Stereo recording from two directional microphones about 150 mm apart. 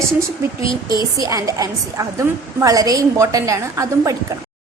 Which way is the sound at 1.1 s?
20° right (ahead or behind).